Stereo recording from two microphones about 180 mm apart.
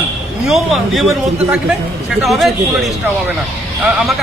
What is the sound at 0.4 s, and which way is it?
Speech, centre (ahead or behind).